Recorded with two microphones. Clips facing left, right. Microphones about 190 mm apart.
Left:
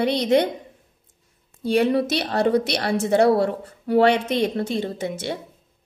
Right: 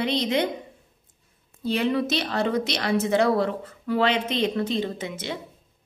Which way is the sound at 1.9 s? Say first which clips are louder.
Left 3 dB; 40° left (ahead or behind).